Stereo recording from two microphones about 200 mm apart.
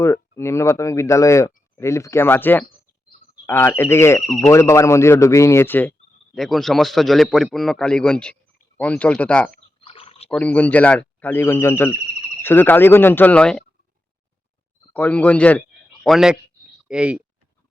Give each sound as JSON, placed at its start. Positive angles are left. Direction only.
{"t": 0.0, "sound": "a man's voice", "side_deg": 15}
{"t": 9.8, "sound": "a sound", "side_deg": 30}
{"t": 10.2, "sound": "speech", "side_deg": 5}
{"t": 14.9, "sound": "a man's voice", "side_deg": 10}